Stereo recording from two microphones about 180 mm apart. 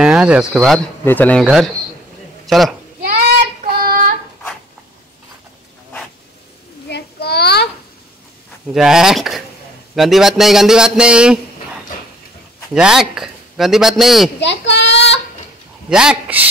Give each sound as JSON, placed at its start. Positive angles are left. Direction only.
{"t": 0.0, "sound": "speech", "side_deg": -5}
{"t": 1.4, "sound": "a man's voice", "side_deg": 0}
{"t": 3.8, "sound": "child singing", "side_deg": -55}
{"t": 6.9, "sound": "a sound", "side_deg": 65}
{"t": 8.7, "sound": "speech", "side_deg": -5}
{"t": 12.7, "sound": "speech", "side_deg": -5}
{"t": 14.4, "sound": "a sound", "side_deg": 75}
{"t": 15.9, "sound": "speech", "side_deg": -5}